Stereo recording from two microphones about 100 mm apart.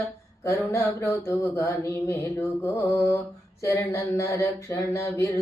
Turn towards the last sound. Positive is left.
turn(degrees=30)  # may be behind; listen again after turning